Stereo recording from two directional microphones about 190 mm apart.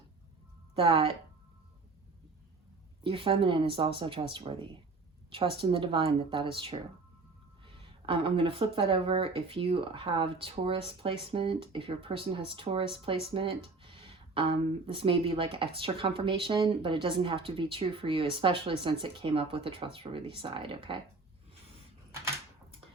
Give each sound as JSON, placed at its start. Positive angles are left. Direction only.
{"t": 0.8, "sound": "speech", "side_deg": -30}
{"t": 3.0, "sound": "speech", "side_deg": -25}
{"t": 13.2, "sound": "a sound", "side_deg": -30}
{"t": 14.8, "sound": "speech", "side_deg": -30}